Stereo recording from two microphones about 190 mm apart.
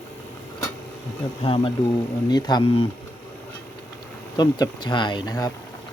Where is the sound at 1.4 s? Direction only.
30° left (ahead or behind).